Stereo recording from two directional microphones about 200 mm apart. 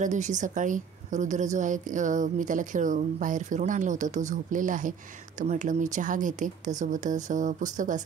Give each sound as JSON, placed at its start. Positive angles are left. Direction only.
{"t": 0.0, "sound": "a woman's voice", "side_deg": -35}